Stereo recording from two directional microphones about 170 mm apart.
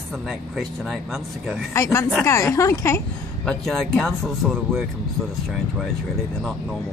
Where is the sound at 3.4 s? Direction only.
5° left (ahead or behind).